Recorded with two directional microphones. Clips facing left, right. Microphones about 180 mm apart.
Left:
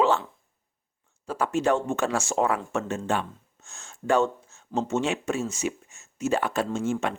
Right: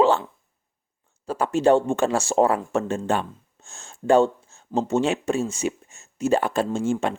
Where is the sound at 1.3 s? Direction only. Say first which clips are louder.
Right 5 dB; 30° right (ahead or behind).